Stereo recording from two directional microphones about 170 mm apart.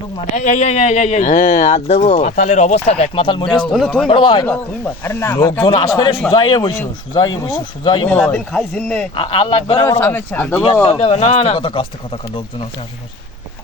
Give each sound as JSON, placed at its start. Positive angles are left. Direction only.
{"t": 0.3, "sound": "speech", "side_deg": 45}
{"t": 3.7, "sound": "speech", "side_deg": 0}
{"t": 4.0, "sound": "speech", "side_deg": 30}
{"t": 5.0, "sound": "speech", "side_deg": 15}
{"t": 8.1, "sound": "speech", "side_deg": 5}
{"t": 9.1, "sound": "speech", "side_deg": 30}
{"t": 10.0, "sound": "speech", "side_deg": 15}
{"t": 10.8, "sound": "speech", "side_deg": 30}